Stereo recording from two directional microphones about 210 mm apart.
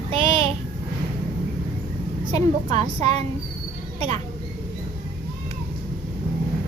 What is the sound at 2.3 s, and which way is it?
A woman's voice, 30° right (ahead or behind).